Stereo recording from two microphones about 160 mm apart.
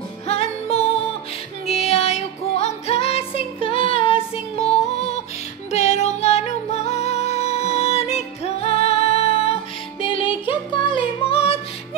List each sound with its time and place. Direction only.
0.3 s music: 40° left (ahead or behind)
4.0 s child singing: 35° left (ahead or behind)
5.7 s music: 45° left (ahead or behind)